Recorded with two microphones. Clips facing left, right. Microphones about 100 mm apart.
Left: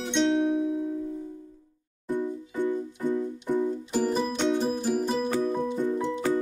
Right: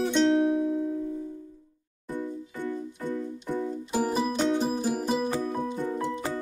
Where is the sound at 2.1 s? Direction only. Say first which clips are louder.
Left 4 dB; 20° left (ahead or behind).